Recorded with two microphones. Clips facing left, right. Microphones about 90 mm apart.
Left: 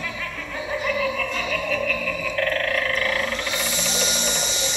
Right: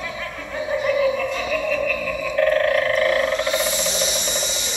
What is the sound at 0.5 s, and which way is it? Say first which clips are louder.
Music: right 5 dB; 20° right (ahead or behind).